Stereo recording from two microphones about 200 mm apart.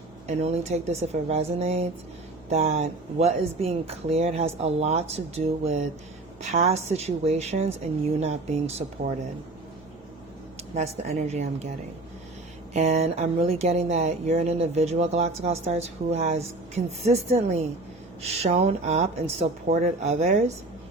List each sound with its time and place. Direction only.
0.3 s speech: 35° right (ahead or behind)
10.8 s speech: 35° right (ahead or behind)
12.7 s speech: 35° right (ahead or behind)